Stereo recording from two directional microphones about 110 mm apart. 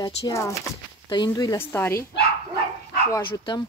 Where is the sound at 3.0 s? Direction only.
30° left (ahead or behind).